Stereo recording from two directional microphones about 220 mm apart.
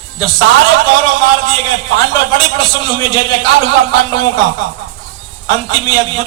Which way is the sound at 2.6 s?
20° left (ahead or behind).